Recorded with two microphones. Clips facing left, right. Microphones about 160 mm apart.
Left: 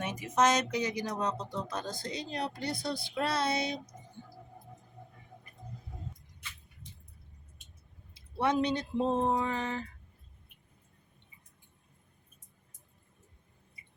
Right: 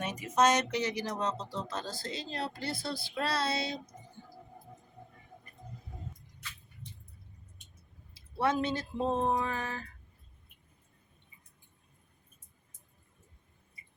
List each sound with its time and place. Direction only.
0.2 s speech: 10° left (ahead or behind)
8.1 s speech: 20° left (ahead or behind)